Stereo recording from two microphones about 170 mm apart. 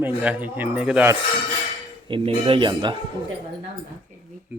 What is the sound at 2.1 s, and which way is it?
Speech, 35° right (ahead or behind).